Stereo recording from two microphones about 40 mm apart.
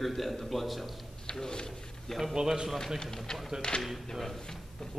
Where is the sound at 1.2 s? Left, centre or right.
Centre.